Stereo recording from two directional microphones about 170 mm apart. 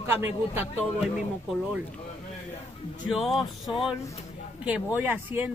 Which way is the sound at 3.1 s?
Centre (ahead or behind).